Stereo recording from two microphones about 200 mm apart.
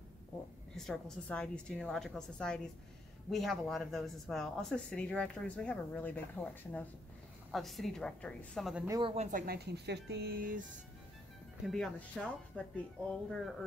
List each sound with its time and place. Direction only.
0.7 s speech: centre (ahead or behind)
8.8 s speech: 15° right (ahead or behind)
9.1 s speech: 35° right (ahead or behind)
9.5 s speech: 55° right (ahead or behind)
11.6 s speech: centre (ahead or behind)